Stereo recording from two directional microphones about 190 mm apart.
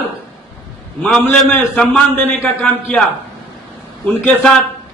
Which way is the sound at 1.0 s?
5° left (ahead or behind).